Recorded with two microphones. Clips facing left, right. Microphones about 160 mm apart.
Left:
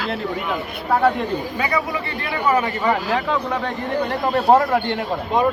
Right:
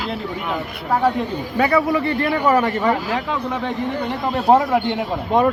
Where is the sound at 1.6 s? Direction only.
50° right (ahead or behind).